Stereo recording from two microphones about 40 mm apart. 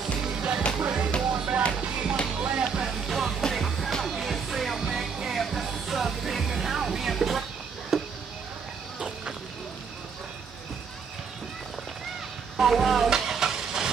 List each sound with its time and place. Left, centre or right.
0.2 s music: right
2.6 s music: centre
7.9 s a sound: centre
12.5 s vehicle: centre